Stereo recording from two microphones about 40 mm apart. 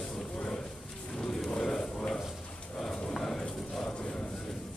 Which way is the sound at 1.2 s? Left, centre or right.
Centre.